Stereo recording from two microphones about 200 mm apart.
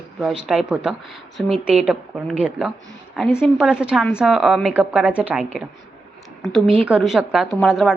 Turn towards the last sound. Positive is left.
turn(degrees=0)  # may be behind; listen again after turning